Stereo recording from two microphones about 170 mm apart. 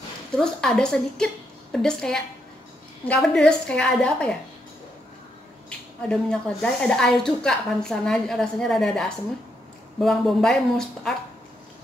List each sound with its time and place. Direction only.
0.4 s a woman's voice: 5° left (ahead or behind)
6.0 s a woman's voice: 5° left (ahead or behind)